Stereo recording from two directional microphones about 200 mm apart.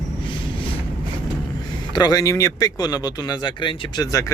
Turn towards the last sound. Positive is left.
turn(degrees=15)  # may be behind; listen again after turning